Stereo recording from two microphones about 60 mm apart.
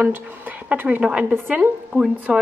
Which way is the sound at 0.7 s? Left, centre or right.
Right.